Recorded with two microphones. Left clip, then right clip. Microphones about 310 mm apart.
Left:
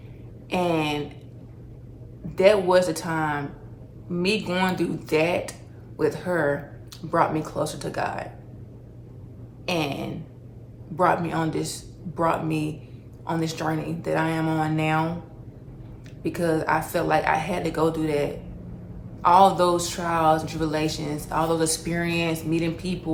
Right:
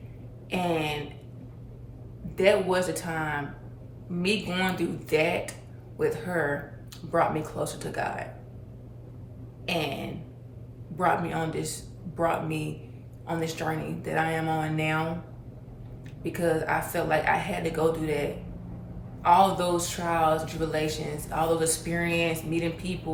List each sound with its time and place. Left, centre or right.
0.5 s a sound: centre
2.3 s a woman's voice: centre
9.6 s a woman's voice: centre
16.2 s a woman's voice: centre